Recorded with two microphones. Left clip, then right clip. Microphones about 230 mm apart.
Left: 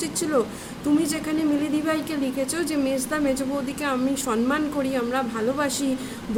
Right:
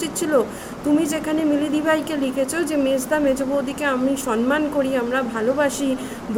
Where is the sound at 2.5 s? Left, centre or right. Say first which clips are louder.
Right 4 dB; centre.